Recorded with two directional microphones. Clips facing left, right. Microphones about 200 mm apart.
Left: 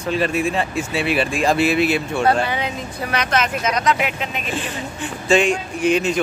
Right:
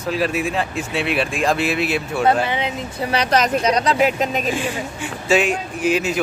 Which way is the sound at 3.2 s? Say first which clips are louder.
Right 4 dB; 35° right (ahead or behind).